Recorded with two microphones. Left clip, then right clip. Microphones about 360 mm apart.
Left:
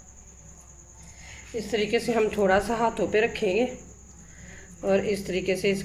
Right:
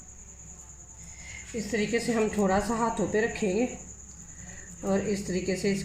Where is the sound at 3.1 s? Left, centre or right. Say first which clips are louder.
Left 4 dB; left.